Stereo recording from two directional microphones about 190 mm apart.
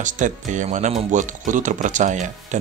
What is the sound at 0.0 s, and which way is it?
Speech, 40° right (ahead or behind).